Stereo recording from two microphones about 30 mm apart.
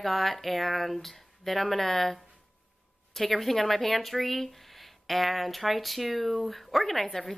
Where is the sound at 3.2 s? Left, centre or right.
Centre.